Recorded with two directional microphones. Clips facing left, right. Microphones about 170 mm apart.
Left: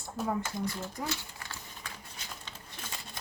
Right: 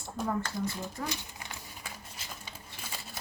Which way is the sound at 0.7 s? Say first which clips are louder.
Even; 15° right (ahead or behind).